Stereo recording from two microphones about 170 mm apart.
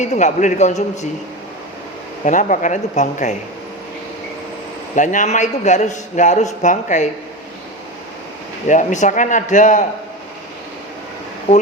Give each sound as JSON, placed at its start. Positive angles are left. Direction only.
{"t": 0.0, "sound": "a man's voice", "side_deg": 45}
{"t": 2.2, "sound": "a man's voice", "side_deg": 50}
{"t": 4.9, "sound": "a man's voice", "side_deg": 45}
{"t": 8.6, "sound": "a man's voice", "side_deg": 45}